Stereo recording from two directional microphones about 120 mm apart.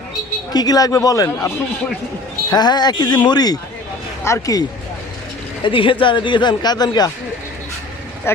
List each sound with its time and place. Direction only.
0.5 s speech: 35° left (ahead or behind)
5.6 s speech: 45° left (ahead or behind)